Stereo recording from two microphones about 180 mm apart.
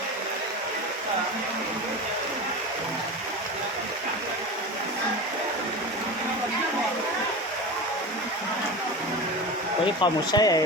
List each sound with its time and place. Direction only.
10.0 s speech: 20° left (ahead or behind)